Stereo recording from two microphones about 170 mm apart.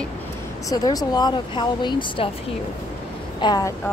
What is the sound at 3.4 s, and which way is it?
Speech, 20° left (ahead or behind).